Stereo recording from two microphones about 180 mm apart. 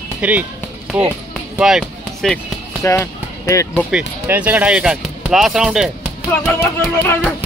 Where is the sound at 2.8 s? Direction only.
15° left (ahead or behind).